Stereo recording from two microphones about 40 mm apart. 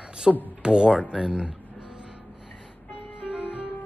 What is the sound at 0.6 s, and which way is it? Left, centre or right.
Speech, right.